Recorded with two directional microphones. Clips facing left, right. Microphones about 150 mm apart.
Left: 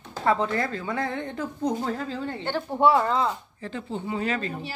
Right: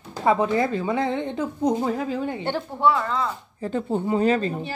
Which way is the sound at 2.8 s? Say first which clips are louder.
Left 2 dB; 30° left (ahead or behind).